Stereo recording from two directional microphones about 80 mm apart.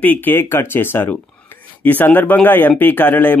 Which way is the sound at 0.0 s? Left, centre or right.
Left.